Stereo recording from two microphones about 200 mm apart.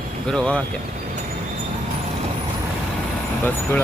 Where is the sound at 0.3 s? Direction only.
5° left (ahead or behind).